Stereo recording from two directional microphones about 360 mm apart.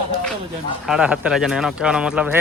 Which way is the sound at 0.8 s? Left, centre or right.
Centre.